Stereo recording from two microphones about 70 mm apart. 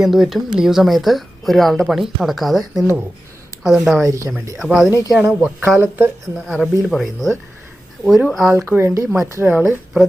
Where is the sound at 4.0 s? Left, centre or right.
Right.